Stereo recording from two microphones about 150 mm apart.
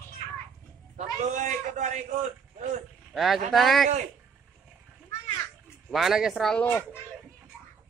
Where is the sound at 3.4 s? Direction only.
Centre (ahead or behind).